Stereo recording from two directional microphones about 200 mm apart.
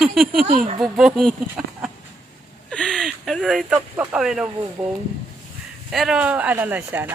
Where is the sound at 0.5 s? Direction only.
40° right (ahead or behind).